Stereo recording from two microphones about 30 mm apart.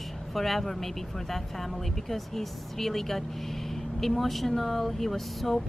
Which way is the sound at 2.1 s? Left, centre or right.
Centre.